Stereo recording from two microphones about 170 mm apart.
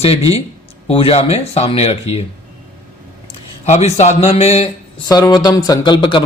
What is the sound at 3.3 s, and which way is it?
Speech, 40° left (ahead or behind).